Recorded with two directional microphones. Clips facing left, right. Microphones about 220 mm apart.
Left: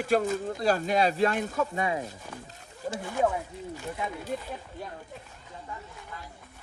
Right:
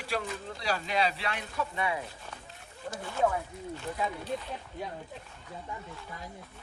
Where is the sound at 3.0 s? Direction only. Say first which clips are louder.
Left 1 dB; 15° left (ahead or behind).